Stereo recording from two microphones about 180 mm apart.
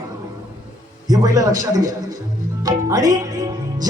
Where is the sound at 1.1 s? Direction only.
20° right (ahead or behind).